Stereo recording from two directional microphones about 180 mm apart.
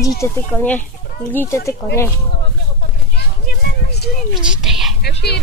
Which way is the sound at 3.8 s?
65° left (ahead or behind).